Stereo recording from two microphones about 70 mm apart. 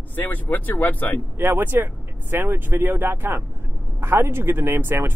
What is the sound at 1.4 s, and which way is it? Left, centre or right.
Speech, right.